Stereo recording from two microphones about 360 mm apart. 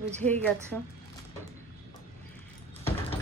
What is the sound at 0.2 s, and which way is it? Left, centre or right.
Speech, centre.